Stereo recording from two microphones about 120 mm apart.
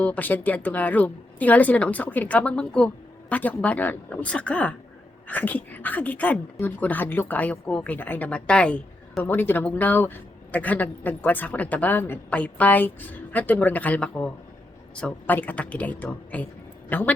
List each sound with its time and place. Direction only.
0.0 s speech: 15° left (ahead or behind)